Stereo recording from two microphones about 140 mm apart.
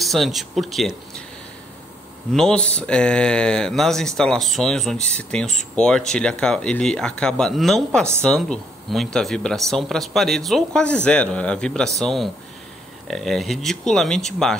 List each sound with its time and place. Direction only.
0.0 s speech: centre (ahead or behind)
2.3 s speech: 5° left (ahead or behind)